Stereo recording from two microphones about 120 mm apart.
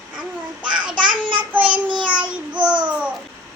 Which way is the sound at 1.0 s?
45° right (ahead or behind).